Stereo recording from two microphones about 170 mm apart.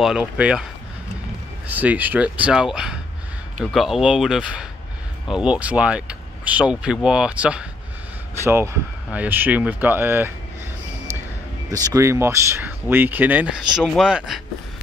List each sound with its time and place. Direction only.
0.0 s speech: 5° right (ahead or behind)
1.7 s speech: 10° right (ahead or behind)
9.1 s speech: 10° right (ahead or behind)
11.7 s speech: 20° right (ahead or behind); by 14.4 s 5° right (ahead or behind)